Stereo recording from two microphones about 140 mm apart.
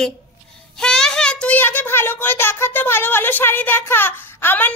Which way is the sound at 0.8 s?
5° left (ahead or behind).